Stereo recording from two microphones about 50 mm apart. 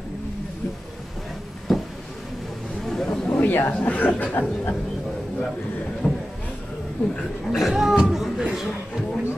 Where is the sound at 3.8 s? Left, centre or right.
Left.